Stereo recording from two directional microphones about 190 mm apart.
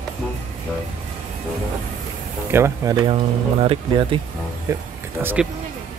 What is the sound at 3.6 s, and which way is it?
Speech, 30° right (ahead or behind).